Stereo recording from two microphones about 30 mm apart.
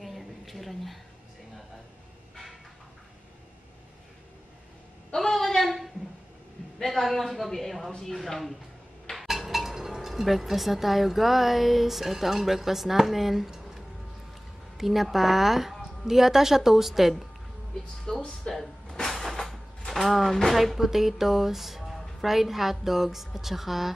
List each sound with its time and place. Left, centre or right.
0.0 s a sound: centre
5.1 s a sound: centre
6.8 s a woman's voice: centre
18.1 s speech: left
18.5 s music: centre
19.0 s cupboard open or close: centre
19.9 s a woman's voice: centre